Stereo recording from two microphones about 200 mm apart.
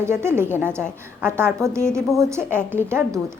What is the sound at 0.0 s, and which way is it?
A woman's voice, 10° right (ahead or behind).